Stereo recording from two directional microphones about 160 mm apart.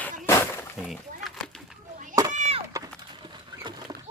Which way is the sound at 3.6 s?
30° right (ahead or behind).